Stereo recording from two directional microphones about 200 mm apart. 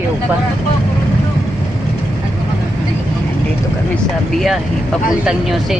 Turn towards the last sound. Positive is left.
turn(degrees=0)  # may be behind; listen again after turning